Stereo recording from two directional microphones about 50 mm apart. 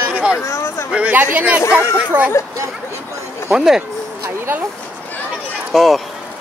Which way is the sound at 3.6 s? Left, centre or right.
Centre.